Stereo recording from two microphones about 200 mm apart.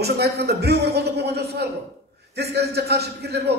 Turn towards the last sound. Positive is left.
turn(degrees=-55)  # may be behind; listen again after turning